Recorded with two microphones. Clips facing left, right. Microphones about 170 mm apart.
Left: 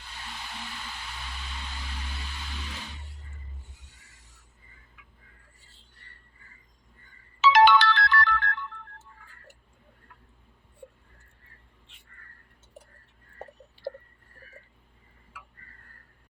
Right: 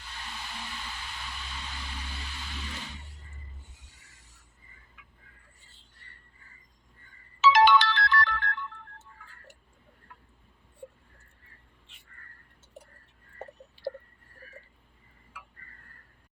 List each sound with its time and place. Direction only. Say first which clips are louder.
7.4 s ringtone: left 2 dB; 60° left (ahead or behind)